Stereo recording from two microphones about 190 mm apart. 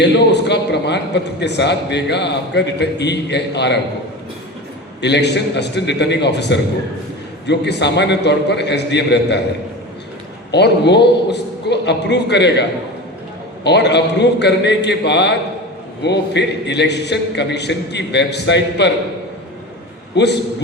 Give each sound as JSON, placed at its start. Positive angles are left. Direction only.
{"t": 0.0, "sound": "a man's voice", "side_deg": 65}
{"t": 4.9, "sound": "a man's voice", "side_deg": 65}
{"t": 10.5, "sound": "a man's voice", "side_deg": 60}
{"t": 13.7, "sound": "a man's voice", "side_deg": 65}
{"t": 20.1, "sound": "a man's voice", "side_deg": 65}